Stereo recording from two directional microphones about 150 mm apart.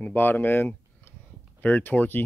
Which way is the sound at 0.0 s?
15° left (ahead or behind).